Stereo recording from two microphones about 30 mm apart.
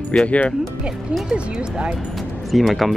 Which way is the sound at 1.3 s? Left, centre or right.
Right.